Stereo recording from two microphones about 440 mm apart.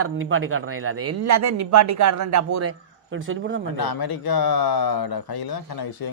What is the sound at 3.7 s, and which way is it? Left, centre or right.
Speech, left.